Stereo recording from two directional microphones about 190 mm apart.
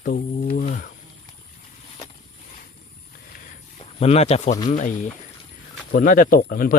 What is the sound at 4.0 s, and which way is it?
Speech, 35° left (ahead or behind).